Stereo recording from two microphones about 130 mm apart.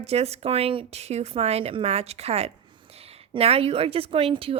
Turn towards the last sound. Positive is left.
turn(degrees=-45)  # may be behind; listen again after turning